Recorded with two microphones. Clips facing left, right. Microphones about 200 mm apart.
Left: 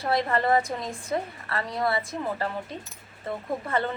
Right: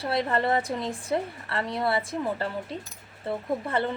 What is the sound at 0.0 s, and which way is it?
A woman's voice, 30° right (ahead or behind).